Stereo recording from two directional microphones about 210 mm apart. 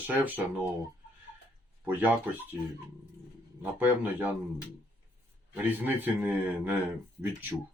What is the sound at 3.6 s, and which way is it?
Speech, 10° right (ahead or behind).